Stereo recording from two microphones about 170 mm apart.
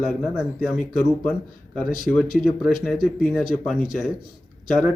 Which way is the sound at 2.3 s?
Centre (ahead or behind).